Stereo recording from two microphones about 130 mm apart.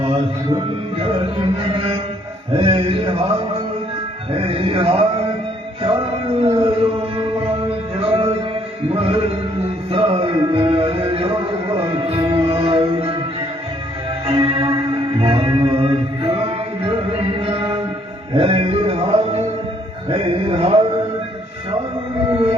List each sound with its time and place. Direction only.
1.5 s mantra: 45° right (ahead or behind)
2.5 s music: 45° right (ahead or behind)
4.3 s music: 45° right (ahead or behind)
14.3 s music: 45° right (ahead or behind)
20.1 s a sound: 45° right (ahead or behind)